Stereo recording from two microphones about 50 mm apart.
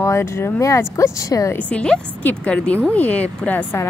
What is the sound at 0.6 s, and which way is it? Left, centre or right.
Speech, left.